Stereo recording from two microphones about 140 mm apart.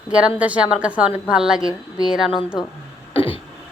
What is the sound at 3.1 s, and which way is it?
Throat clearing, 40° left (ahead or behind).